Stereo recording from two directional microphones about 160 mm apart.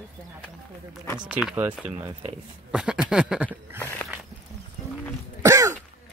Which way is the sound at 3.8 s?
10° left (ahead or behind).